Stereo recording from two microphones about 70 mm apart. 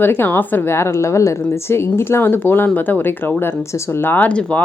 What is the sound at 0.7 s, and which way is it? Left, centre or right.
A woman's voice, left.